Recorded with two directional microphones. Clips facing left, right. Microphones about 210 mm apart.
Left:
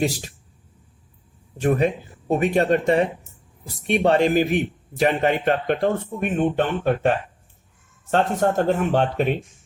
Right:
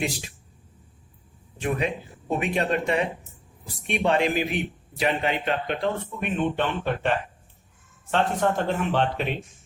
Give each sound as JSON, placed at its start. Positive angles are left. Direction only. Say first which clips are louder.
{"t": 0.0, "sound": "speech", "louder": "left 6 dB", "side_deg": 40}
{"t": 1.6, "sound": "a man's voice", "louder": "left 7 dB", "side_deg": 40}
{"t": 8.4, "sound": "a man's voice", "louder": "left 4 dB", "side_deg": 45}